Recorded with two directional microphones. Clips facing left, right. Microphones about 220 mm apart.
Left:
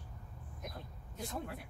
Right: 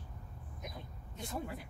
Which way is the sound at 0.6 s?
Centre (ahead or behind).